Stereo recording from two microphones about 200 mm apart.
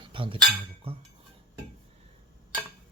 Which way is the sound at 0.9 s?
30° right (ahead or behind).